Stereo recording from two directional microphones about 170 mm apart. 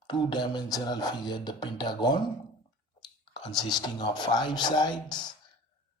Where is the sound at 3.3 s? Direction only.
25° left (ahead or behind).